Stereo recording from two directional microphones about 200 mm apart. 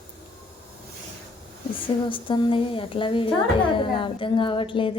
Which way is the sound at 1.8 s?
25° left (ahead or behind).